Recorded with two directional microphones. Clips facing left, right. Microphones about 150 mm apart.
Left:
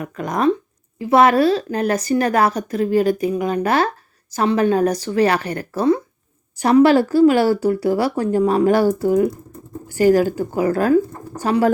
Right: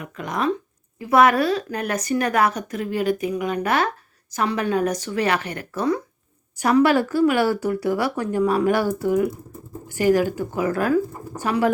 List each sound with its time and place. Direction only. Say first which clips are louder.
0.0 s a woman's voice: left 6 dB; 40° left (ahead or behind)
0.9 s a woman's voice: left 3 dB; 30° left (ahead or behind)